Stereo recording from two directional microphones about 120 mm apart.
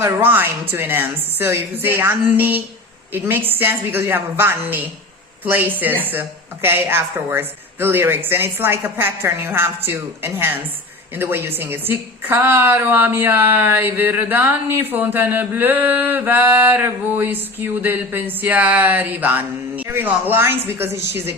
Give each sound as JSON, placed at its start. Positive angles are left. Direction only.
{"t": 0.0, "sound": "a woman's voice", "side_deg": -15}